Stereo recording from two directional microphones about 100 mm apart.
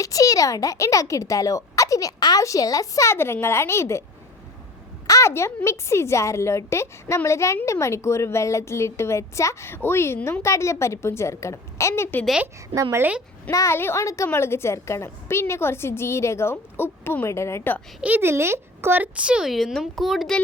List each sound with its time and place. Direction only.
0.0 s a child's voice: 35° left (ahead or behind)
5.0 s a sound: 30° left (ahead or behind)
5.6 s a woman's voice: 25° left (ahead or behind)
12.7 s a woman's voice: 30° right (ahead or behind)
13.0 s a woman's voice: 15° right (ahead or behind)
13.5 s a child's voice: 35° left (ahead or behind)
18.0 s a woman's voice: 20° right (ahead or behind); by 20.3 s centre (ahead or behind)